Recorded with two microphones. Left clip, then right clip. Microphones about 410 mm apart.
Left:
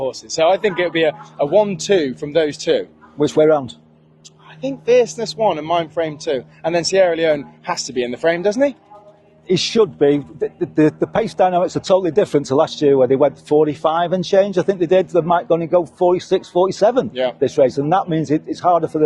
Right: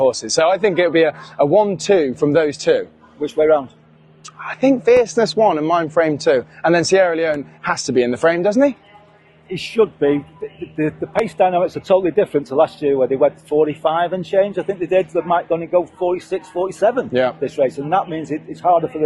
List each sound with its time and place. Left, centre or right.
0.0 s speech: right
3.2 s speech: left
4.4 s speech: right
9.6 s a man's voice: left
10.8 s speech: left
14.8 s speech: left